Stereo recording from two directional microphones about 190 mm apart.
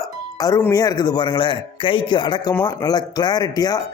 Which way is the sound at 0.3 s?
20° left (ahead or behind).